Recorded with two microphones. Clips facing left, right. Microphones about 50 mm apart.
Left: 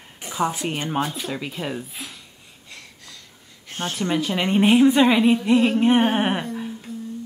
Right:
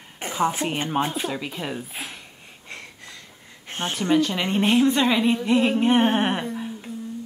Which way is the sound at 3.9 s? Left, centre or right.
Centre.